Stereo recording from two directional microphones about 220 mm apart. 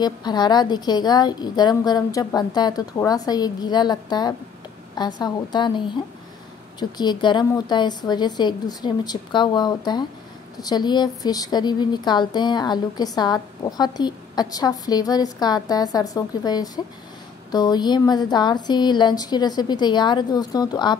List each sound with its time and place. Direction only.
0.0 s a woman's voice: 20° left (ahead or behind)